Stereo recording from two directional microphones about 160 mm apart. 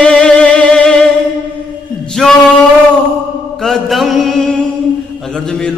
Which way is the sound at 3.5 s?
Centre (ahead or behind).